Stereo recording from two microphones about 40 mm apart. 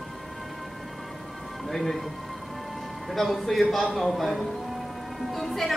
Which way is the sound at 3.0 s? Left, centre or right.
Centre.